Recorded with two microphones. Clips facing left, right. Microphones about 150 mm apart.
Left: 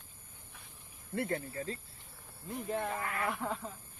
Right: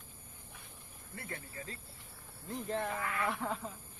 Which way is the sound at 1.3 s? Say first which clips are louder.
Left 9 dB; 35° left (ahead or behind).